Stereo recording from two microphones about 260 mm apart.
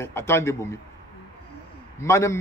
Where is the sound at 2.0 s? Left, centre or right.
Centre.